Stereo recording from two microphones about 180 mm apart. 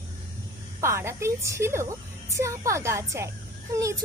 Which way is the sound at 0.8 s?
15° right (ahead or behind).